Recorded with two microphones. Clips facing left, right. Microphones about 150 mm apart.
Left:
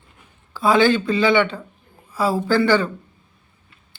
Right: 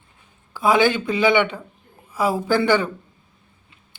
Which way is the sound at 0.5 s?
15° right (ahead or behind).